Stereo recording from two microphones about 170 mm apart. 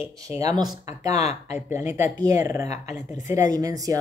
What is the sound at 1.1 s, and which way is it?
Speech, 40° left (ahead or behind).